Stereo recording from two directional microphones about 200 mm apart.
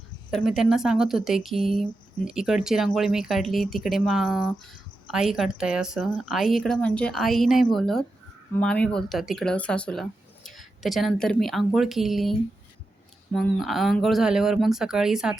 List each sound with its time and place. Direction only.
0.3 s speech: centre (ahead or behind)